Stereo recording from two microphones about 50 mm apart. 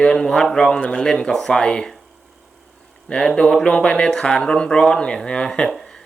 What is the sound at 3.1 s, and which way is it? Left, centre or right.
Speech, centre.